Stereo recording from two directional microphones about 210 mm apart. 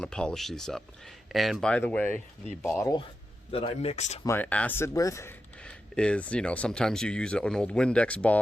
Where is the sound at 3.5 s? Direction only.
30° left (ahead or behind).